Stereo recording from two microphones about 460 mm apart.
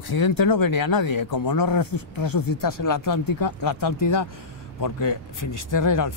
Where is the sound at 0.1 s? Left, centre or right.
Left.